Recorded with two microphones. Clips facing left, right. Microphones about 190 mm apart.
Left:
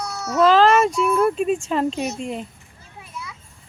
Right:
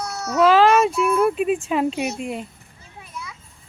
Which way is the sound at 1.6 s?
5° right (ahead or behind).